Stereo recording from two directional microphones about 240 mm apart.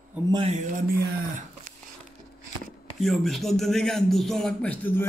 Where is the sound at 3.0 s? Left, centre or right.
Centre.